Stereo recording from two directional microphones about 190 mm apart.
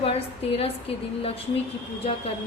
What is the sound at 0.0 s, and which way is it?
Speech, 30° left (ahead or behind).